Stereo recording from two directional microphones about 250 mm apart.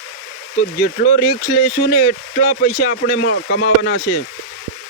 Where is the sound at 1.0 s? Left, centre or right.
Left.